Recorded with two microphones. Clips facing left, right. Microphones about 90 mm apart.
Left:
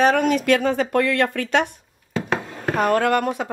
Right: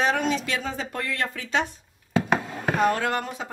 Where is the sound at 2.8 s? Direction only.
55° left (ahead or behind).